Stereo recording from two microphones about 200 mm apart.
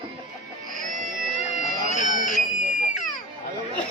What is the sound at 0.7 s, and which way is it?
Music, 40° right (ahead or behind).